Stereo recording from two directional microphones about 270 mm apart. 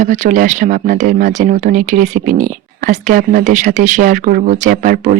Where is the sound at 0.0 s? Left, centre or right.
Right.